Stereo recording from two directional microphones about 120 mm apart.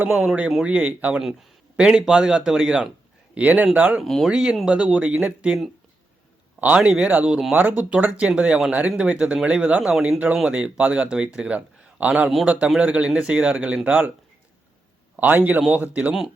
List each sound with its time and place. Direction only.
0.0 s speech: 5° right (ahead or behind)
3.3 s speech: 15° right (ahead or behind)
4.0 s a man's voice: centre (ahead or behind)
12.3 s speech: centre (ahead or behind)
15.1 s speech: 15° right (ahead or behind)